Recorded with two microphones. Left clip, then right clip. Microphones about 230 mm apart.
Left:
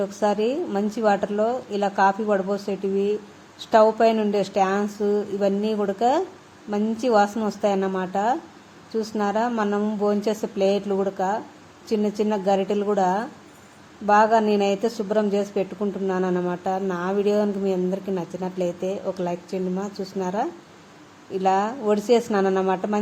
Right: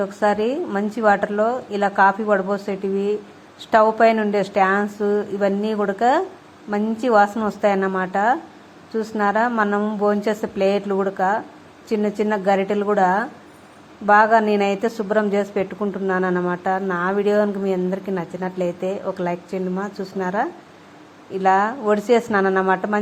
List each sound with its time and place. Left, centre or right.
0.2 s a woman's voice: centre
18.6 s speech: right
19.0 s a woman's voice: centre